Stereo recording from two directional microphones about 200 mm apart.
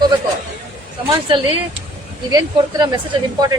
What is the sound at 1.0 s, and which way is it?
Speech, 25° right (ahead or behind).